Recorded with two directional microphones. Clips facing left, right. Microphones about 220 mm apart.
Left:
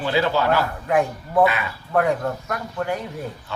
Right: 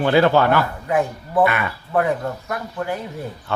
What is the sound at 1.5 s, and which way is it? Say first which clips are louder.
Speech: right 2 dB; 60° right (ahead or behind).